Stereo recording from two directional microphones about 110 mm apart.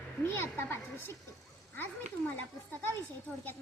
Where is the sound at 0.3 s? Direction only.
20° left (ahead or behind).